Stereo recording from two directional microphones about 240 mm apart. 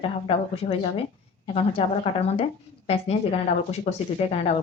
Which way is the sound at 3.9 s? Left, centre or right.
Left.